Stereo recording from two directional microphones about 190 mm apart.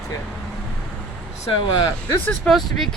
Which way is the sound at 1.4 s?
25° left (ahead or behind).